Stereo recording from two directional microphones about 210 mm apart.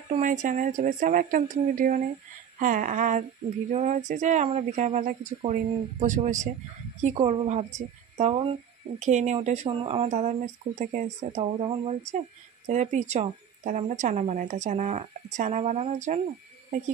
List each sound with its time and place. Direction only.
0.1 s a woman's voice: 35° right (ahead or behind)